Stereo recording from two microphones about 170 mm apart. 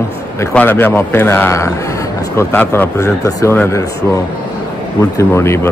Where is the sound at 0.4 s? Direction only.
10° left (ahead or behind).